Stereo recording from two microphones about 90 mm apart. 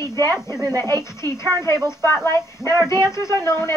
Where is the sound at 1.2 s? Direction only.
30° left (ahead or behind).